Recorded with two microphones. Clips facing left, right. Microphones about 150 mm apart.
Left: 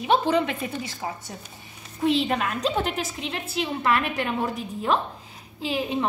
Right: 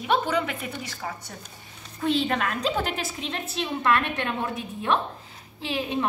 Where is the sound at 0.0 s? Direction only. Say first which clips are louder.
Left 3 dB; 25° left (ahead or behind).